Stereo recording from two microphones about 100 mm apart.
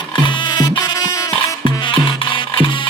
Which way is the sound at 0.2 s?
55° left (ahead or behind).